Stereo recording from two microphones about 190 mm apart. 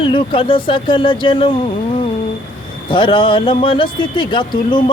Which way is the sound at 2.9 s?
25° left (ahead or behind).